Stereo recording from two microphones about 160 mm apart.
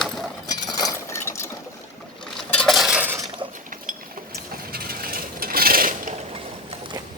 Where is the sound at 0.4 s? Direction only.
25° left (ahead or behind).